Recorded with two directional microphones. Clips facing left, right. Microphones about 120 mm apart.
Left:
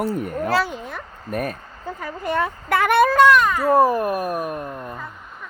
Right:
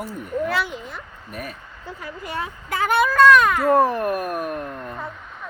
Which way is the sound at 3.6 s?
10° left (ahead or behind).